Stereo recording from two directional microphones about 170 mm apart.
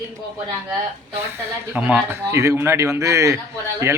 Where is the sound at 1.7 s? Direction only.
10° right (ahead or behind).